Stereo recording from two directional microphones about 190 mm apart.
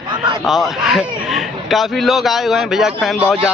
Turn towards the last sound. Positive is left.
turn(degrees=0)  # may be behind; listen again after turning